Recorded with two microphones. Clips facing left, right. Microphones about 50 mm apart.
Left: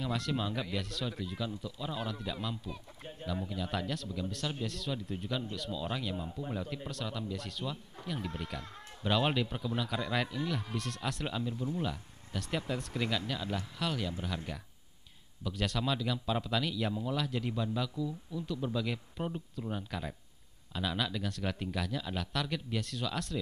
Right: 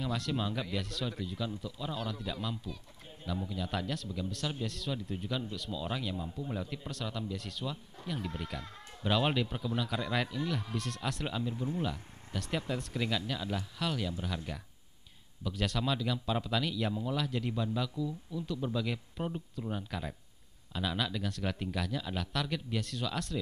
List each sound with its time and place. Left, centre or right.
0.0 s speech: centre
11.5 s speech: centre
11.8 s speech: centre